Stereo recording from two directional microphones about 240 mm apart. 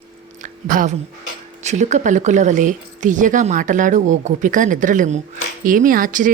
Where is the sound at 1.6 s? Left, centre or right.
Right.